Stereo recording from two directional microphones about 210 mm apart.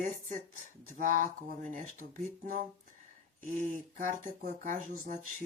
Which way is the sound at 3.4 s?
40° right (ahead or behind).